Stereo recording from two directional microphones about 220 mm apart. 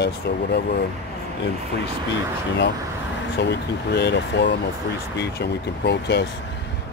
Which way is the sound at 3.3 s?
50° left (ahead or behind).